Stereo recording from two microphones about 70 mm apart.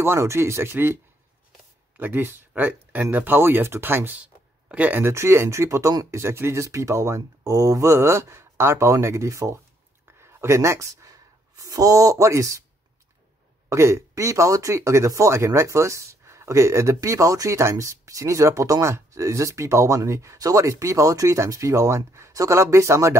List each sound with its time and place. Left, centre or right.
0.0 s speech: right
2.0 s speech: right
4.2 s a sound: centre
5.0 s speech: right
13.7 s speech: right